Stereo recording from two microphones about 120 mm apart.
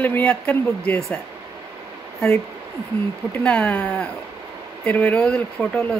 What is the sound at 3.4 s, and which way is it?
Speech, 10° left (ahead or behind).